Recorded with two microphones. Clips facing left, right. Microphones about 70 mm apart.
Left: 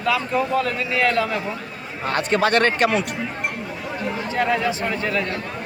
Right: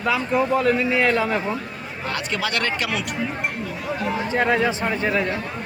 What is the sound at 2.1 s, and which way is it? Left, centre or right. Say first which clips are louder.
Speech: left 7 dB; left.